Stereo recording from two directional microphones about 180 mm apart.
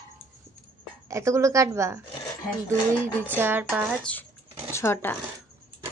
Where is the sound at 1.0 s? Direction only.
15° right (ahead or behind).